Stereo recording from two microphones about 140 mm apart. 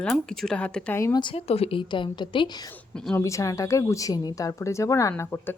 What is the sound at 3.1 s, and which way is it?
A woman's voice, 20° left (ahead or behind).